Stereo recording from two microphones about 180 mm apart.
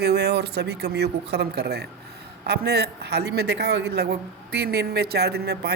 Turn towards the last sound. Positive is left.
turn(degrees=-65)  # may be behind; listen again after turning